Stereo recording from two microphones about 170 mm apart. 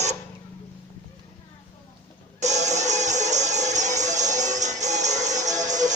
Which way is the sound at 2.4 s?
45° right (ahead or behind).